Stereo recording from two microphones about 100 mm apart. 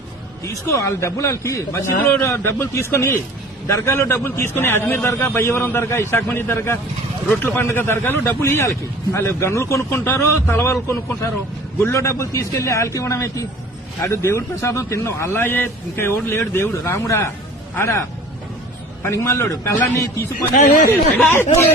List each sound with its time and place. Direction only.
0.7 s a man's voice: 30° left (ahead or behind)
19.0 s a man's voice: 30° left (ahead or behind)